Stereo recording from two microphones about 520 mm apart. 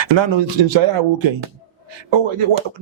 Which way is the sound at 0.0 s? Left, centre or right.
Right.